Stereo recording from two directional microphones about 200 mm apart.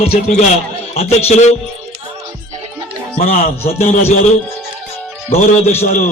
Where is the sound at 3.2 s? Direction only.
35° left (ahead or behind).